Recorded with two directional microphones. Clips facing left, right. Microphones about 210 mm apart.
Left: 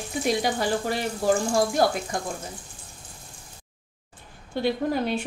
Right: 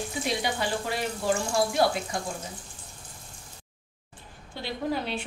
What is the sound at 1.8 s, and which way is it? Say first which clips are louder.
Speech: left 1 dB; 45° left (ahead or behind).